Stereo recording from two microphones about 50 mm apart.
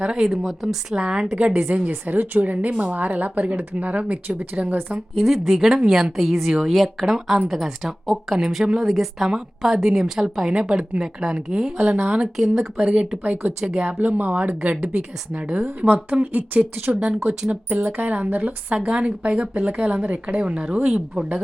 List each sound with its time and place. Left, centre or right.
0.0 s a woman's voice: centre
0.3 s a woman's voice: centre
1.0 s a woman's voice: centre
1.9 s a woman's voice: right
5.1 s a woman's voice: centre; by 12.3 s right
12.4 s a woman's voice: centre
12.8 s a woman's voice: right
14.0 s a woman's voice: right
17.9 s a woman's voice: right